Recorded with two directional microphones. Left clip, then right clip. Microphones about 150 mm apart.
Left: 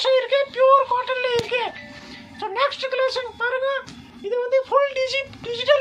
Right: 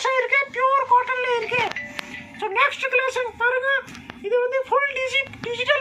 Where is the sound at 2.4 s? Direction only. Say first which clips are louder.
Right 2 dB; 65° left (ahead or behind).